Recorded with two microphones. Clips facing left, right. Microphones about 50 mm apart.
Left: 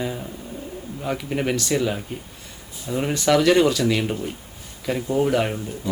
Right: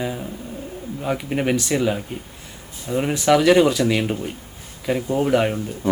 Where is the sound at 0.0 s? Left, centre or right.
Centre.